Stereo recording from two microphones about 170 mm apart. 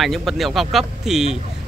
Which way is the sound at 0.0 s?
Centre (ahead or behind).